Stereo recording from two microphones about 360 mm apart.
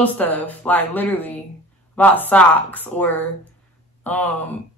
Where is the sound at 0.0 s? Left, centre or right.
Centre.